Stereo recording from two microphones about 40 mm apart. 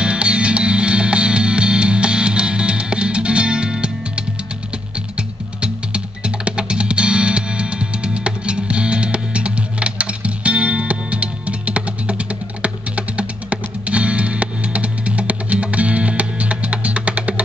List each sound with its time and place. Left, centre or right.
0.0 s music: right